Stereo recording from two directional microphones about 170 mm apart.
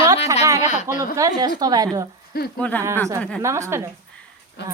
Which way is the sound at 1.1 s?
20° right (ahead or behind).